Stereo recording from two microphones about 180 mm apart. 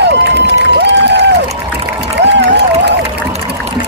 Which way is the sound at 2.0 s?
75° right (ahead or behind).